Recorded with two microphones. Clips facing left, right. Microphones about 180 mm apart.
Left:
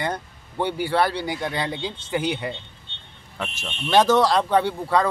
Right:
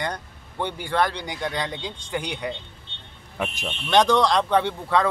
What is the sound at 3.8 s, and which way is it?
Speech, 5° left (ahead or behind).